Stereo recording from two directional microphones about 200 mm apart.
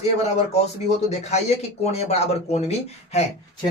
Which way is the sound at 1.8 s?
30° left (ahead or behind).